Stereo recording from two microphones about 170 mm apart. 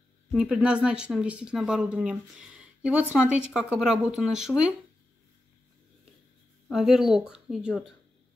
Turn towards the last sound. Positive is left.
turn(degrees=0)  # may be behind; listen again after turning